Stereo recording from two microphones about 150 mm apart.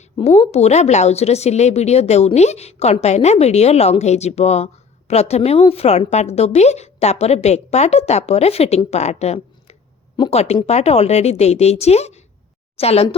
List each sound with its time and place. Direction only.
0.2 s a woman's voice: 40° left (ahead or behind)